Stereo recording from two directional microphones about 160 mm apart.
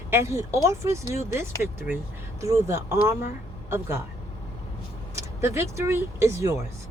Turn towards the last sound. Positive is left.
turn(degrees=-20)  # may be behind; listen again after turning